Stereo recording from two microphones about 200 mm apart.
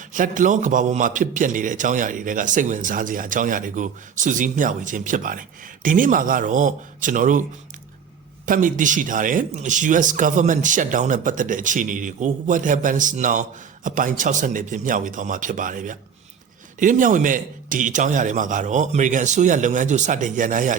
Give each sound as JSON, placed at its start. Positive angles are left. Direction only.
{"t": 0.1, "sound": "a man's voice", "side_deg": -40}
{"t": 8.4, "sound": "a man's voice", "side_deg": -40}